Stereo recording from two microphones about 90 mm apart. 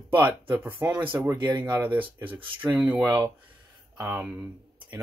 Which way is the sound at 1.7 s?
20° right (ahead or behind).